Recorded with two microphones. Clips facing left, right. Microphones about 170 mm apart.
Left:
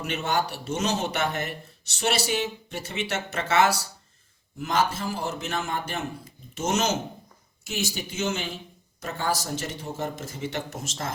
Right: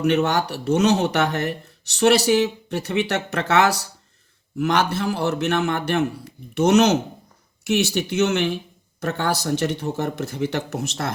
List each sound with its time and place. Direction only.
0.0 s speech: 65° right (ahead or behind)